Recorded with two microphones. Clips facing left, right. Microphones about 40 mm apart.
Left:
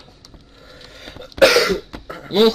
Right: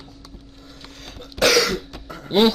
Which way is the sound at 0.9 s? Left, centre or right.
Left.